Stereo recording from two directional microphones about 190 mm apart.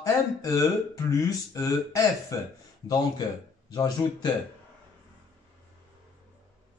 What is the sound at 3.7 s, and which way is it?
Speech, 20° left (ahead or behind).